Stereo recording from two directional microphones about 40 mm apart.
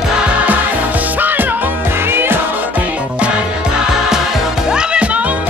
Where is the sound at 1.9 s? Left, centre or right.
Right.